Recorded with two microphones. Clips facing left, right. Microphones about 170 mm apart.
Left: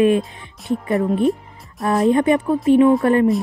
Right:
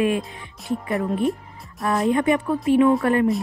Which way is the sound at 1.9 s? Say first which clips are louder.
Left 4 dB; 25° left (ahead or behind).